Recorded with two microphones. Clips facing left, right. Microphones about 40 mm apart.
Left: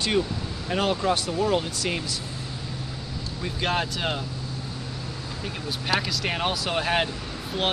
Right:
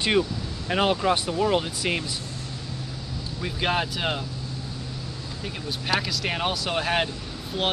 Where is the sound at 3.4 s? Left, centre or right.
Centre.